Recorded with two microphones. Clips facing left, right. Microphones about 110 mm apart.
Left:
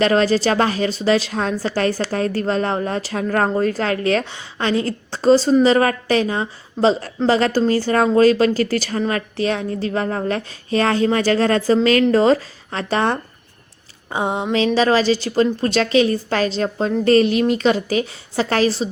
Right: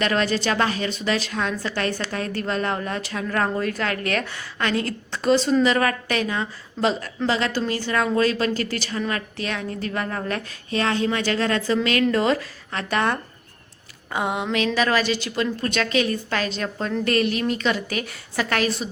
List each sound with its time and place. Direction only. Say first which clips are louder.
0.0 s a woman's voice: left 6 dB; 35° left (ahead or behind)
14.1 s a sound: left 3 dB; 25° left (ahead or behind)
14.5 s a woman's voice: left 6 dB; 30° left (ahead or behind)